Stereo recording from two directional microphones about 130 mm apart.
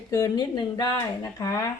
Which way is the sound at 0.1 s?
30° left (ahead or behind).